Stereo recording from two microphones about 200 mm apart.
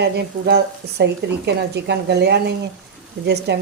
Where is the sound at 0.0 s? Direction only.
55° right (ahead or behind).